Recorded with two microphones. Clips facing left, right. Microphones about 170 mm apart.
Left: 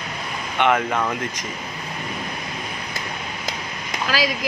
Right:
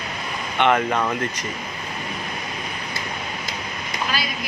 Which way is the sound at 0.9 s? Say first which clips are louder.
Right 1 dB; 5° right (ahead or behind).